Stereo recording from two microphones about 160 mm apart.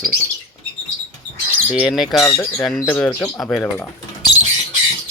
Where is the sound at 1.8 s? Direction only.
Centre (ahead or behind).